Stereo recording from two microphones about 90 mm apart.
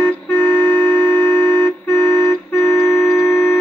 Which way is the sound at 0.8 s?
25° left (ahead or behind).